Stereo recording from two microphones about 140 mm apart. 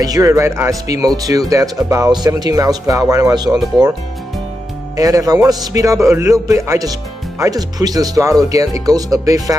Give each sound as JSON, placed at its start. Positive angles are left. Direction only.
{"t": 0.0, "sound": "a man's voice", "side_deg": -25}
{"t": 4.9, "sound": "a man's voice", "side_deg": -25}